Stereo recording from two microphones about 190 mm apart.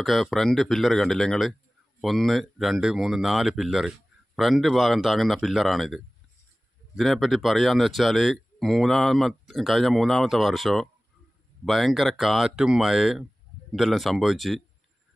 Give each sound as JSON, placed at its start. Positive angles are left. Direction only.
{"t": 0.0, "sound": "speech", "side_deg": 0}